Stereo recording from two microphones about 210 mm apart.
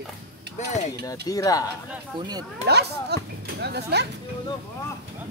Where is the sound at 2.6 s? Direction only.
50° right (ahead or behind).